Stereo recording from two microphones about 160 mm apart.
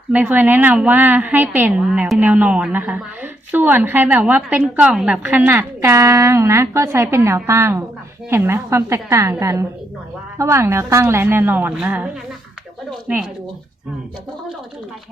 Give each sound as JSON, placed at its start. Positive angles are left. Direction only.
{"t": 0.1, "sound": "a woman's voice", "side_deg": -10}
{"t": 13.1, "sound": "a woman's voice", "side_deg": -10}